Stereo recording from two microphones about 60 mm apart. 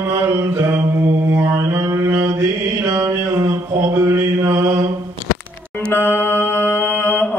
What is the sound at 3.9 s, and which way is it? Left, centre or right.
Mantra, right.